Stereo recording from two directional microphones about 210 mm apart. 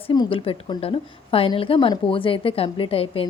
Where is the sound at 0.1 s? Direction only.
25° left (ahead or behind).